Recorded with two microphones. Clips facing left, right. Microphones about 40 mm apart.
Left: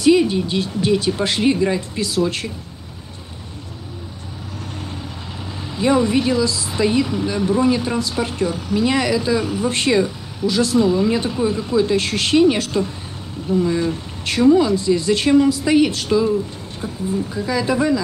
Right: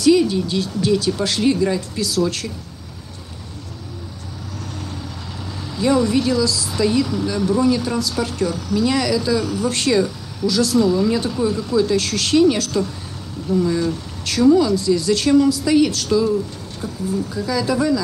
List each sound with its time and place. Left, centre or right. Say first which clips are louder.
0.0 s speech: even; left
5.6 s speech: left 1 dB; left